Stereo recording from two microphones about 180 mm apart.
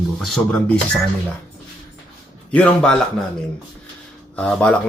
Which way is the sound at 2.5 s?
10° left (ahead or behind).